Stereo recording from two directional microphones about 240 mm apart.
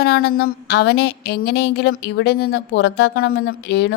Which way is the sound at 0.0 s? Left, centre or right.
Left.